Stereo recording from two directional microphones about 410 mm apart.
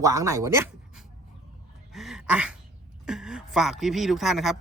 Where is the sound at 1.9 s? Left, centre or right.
Centre.